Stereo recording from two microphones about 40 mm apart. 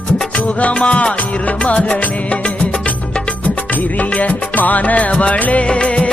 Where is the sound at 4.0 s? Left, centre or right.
Left.